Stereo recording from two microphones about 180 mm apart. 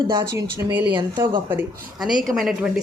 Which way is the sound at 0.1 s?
20° right (ahead or behind).